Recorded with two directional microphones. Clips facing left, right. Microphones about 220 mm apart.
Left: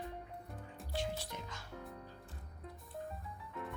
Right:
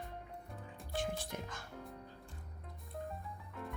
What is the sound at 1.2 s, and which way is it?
Speech, 50° right (ahead or behind).